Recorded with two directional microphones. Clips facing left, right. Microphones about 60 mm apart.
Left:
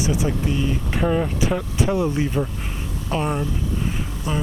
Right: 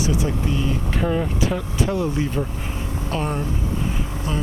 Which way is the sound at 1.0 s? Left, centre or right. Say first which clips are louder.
Left 2 dB; centre.